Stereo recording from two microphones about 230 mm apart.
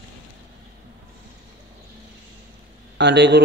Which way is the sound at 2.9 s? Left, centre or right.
Right.